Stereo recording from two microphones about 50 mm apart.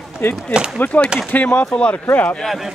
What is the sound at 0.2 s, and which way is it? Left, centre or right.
Speech, left.